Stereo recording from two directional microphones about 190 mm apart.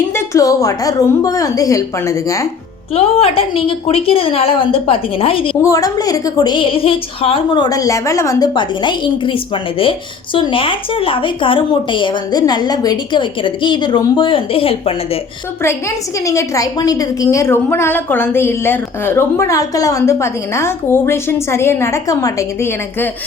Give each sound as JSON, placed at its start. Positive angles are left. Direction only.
{"t": 0.1, "sound": "a woman's voice", "side_deg": 15}
{"t": 2.9, "sound": "a woman's voice", "side_deg": 30}
{"t": 5.6, "sound": "a woman's voice", "side_deg": 20}
{"t": 16.2, "sound": "a woman's voice", "side_deg": 15}